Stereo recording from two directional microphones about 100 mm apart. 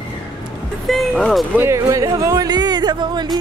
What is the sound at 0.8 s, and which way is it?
Music, 5° left (ahead or behind).